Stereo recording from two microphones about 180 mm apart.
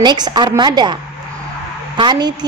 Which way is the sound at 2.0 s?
25° right (ahead or behind).